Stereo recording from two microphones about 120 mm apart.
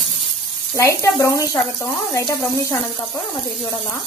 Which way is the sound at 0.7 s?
25° left (ahead or behind).